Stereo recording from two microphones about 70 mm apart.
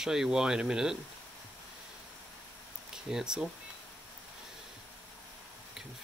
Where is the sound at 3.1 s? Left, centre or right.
Centre.